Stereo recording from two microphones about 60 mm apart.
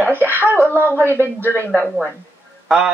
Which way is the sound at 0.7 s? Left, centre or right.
Right.